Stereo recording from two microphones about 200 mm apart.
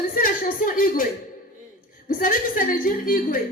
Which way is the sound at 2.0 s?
45° left (ahead or behind).